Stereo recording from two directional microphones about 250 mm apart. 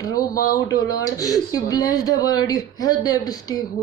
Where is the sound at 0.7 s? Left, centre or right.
Centre.